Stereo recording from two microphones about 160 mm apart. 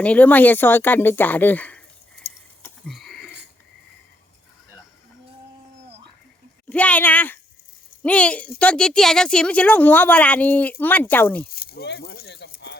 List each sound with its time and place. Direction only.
0.0 s speech: 10° left (ahead or behind)
2.8 s a sound: centre (ahead or behind)
6.7 s speech: 10° left (ahead or behind)
11.4 s speech: 75° left (ahead or behind)